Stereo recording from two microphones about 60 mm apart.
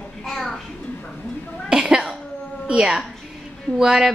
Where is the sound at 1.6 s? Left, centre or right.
Centre.